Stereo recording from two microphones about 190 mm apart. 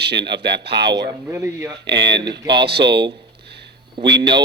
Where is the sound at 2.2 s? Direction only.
25° right (ahead or behind).